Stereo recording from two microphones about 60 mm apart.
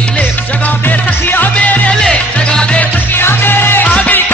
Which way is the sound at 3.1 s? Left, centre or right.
Left.